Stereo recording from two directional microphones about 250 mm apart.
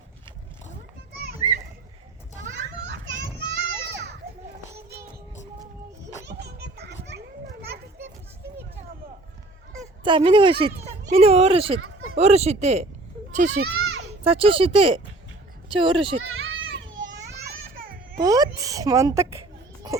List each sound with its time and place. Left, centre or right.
1.4 s children playing: centre
2.4 s children playing: right
6.2 s children playing: right
9.8 s speech: centre
13.7 s children playing: right
14.3 s speech: right
16.2 s children playing: right
17.3 s children playing: right
18.2 s speech: centre